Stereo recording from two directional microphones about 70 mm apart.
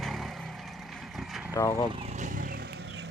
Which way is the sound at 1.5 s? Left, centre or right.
Left.